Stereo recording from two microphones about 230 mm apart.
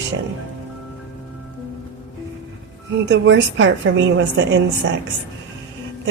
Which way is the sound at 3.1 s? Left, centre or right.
Right.